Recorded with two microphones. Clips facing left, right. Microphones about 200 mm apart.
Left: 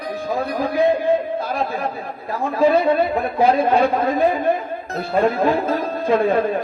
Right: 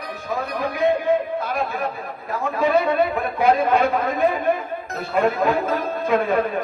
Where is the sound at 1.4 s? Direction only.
30° left (ahead or behind).